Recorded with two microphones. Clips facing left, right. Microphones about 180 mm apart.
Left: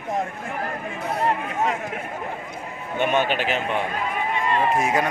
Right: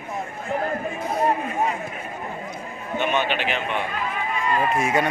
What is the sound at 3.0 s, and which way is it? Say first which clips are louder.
Speech: left 2 dB; 45° left (ahead or behind).